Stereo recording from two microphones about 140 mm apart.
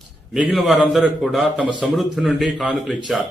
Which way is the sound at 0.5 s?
Centre (ahead or behind).